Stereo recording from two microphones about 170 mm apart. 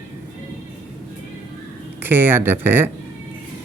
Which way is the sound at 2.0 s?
10° right (ahead or behind).